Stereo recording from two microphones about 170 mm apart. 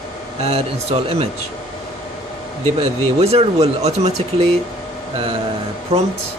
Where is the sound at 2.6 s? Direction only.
35° right (ahead or behind).